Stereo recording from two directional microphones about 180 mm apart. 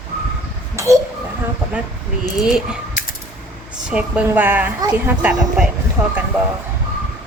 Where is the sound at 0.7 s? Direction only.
15° right (ahead or behind).